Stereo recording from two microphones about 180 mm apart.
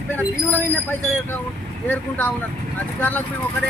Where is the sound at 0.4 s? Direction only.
10° left (ahead or behind).